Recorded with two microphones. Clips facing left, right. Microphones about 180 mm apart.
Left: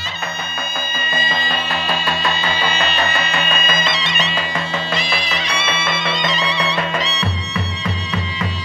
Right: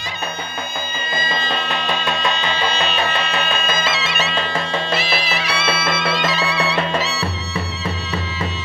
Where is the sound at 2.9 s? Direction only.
5° right (ahead or behind).